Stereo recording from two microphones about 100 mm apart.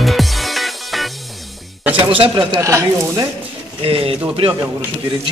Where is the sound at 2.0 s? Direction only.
60° right (ahead or behind).